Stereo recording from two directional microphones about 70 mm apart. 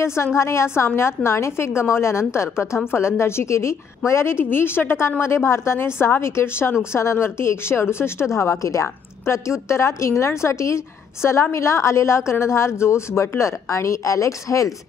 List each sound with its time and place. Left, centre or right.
0.0 s a woman's voice: left